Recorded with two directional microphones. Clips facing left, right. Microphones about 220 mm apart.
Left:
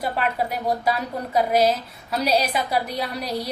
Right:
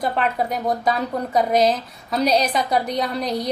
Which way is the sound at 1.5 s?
10° left (ahead or behind).